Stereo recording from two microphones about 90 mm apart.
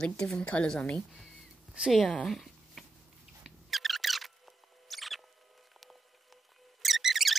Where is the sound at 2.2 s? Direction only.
Centre (ahead or behind).